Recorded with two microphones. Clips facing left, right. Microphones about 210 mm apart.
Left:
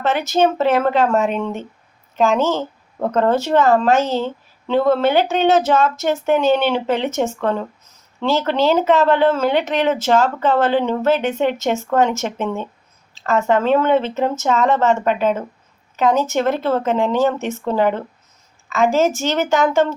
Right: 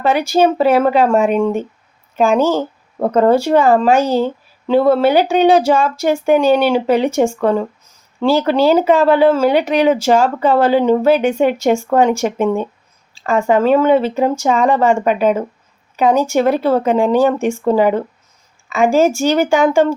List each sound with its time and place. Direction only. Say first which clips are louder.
0.0 s speech: right 3 dB; 10° right (ahead or behind)
2.5 s a sound: right 4 dB; 40° right (ahead or behind)
3.1 s speech: right 5 dB; 10° right (ahead or behind)